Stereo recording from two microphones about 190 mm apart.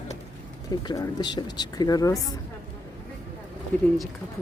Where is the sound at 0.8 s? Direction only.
20° left (ahead or behind).